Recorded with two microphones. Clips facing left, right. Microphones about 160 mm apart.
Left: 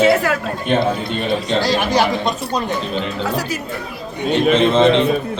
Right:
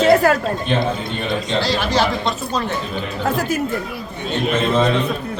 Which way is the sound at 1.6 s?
45° left (ahead or behind).